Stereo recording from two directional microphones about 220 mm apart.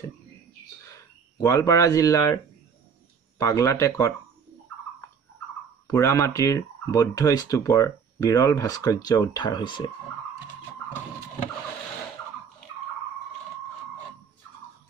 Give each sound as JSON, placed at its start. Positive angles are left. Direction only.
{"t": 1.4, "sound": "speech", "side_deg": 15}
{"t": 5.9, "sound": "speech", "side_deg": 15}